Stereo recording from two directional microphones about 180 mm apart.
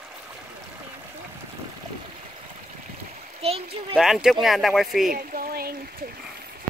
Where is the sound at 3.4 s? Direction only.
35° right (ahead or behind).